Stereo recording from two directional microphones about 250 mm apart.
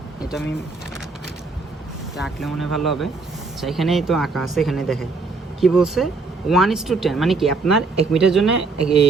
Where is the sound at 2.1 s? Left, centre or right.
Centre.